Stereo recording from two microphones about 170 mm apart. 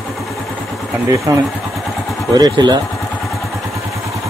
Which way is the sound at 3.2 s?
Centre (ahead or behind).